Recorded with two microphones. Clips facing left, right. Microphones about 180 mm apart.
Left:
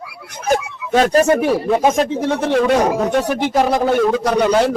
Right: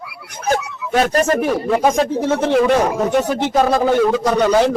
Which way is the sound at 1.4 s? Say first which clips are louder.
Left 1 dB; 5° left (ahead or behind).